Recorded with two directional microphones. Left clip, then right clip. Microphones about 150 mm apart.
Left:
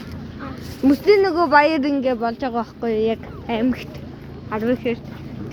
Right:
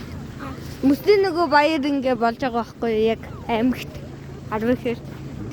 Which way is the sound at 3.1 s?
30° right (ahead or behind).